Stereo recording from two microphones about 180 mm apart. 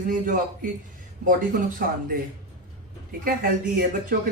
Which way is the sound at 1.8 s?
55° right (ahead or behind).